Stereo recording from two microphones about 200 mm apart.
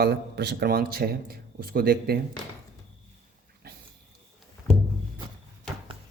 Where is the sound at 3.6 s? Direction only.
50° right (ahead or behind).